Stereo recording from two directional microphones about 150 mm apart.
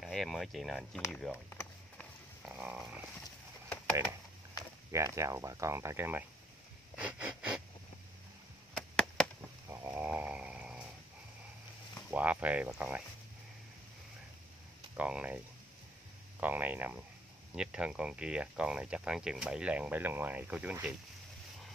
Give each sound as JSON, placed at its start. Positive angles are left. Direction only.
{"t": 0.0, "sound": "speech", "side_deg": 0}
{"t": 1.5, "sound": "a sound", "side_deg": 10}
{"t": 2.4, "sound": "a sound", "side_deg": -10}
{"t": 4.9, "sound": "speech", "side_deg": -20}
{"t": 7.0, "sound": "wheeze", "side_deg": -10}
{"t": 8.7, "sound": "a sound", "side_deg": 5}
{"t": 9.7, "sound": "snoring", "side_deg": -15}
{"t": 12.1, "sound": "speech", "side_deg": -10}
{"t": 15.0, "sound": "speech", "side_deg": -5}